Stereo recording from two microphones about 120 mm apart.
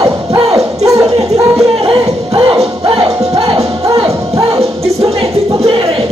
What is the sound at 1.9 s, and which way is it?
Music, 45° right (ahead or behind).